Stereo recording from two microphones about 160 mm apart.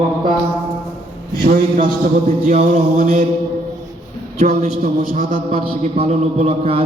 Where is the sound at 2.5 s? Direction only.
50° right (ahead or behind).